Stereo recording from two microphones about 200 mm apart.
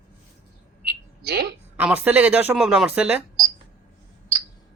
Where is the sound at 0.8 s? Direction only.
50° right (ahead or behind).